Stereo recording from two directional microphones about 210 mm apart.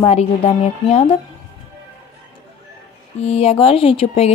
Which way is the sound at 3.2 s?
30° left (ahead or behind).